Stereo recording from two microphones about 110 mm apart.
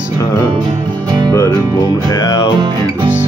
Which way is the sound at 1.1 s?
40° right (ahead or behind).